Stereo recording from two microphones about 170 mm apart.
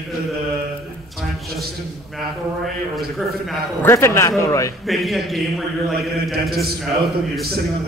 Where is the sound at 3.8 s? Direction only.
15° left (ahead or behind).